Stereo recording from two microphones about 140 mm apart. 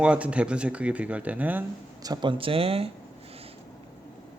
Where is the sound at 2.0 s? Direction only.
30° right (ahead or behind).